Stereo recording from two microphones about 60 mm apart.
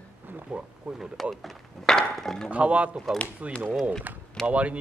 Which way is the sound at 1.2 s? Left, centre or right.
Centre.